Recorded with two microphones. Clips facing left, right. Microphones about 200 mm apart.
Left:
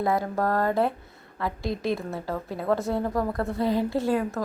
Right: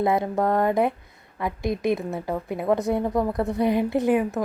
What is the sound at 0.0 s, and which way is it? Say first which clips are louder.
A woman's voice: right 3 dB; 20° right (ahead or behind).